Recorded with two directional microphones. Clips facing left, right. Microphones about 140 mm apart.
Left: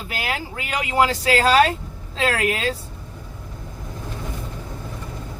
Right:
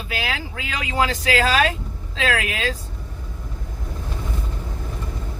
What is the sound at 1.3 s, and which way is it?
Speech, 35° left (ahead or behind).